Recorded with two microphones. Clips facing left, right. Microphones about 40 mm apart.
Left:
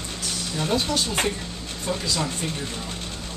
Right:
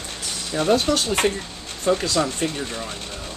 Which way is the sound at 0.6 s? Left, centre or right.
Right.